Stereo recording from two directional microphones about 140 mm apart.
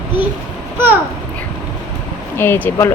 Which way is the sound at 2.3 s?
15° left (ahead or behind).